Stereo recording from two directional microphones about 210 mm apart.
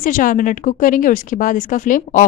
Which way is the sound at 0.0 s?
40° left (ahead or behind).